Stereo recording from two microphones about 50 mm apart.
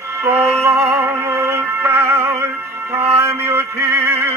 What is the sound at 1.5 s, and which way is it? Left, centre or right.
Music, right.